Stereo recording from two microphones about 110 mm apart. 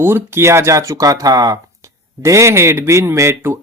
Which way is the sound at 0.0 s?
20° right (ahead or behind).